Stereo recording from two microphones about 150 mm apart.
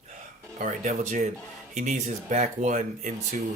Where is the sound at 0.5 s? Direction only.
55° right (ahead or behind).